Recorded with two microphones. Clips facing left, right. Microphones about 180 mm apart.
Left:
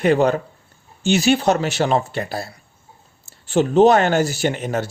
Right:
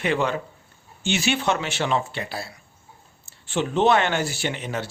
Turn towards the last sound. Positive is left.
turn(degrees=45)  # may be behind; listen again after turning